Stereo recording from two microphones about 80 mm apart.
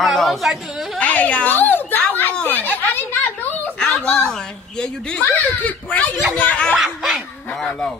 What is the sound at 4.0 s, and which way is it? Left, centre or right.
A woman's voice, centre.